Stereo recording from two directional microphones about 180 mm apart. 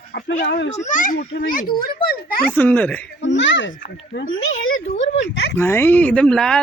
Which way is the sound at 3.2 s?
85° left.